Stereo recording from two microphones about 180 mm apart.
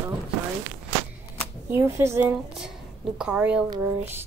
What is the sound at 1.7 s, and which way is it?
Speech, 15° right (ahead or behind).